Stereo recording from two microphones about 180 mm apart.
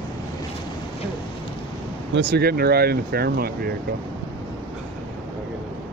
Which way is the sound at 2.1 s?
65° right (ahead or behind).